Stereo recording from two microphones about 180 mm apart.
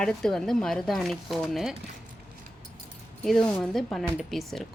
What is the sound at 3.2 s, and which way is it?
Speech, 5° left (ahead or behind).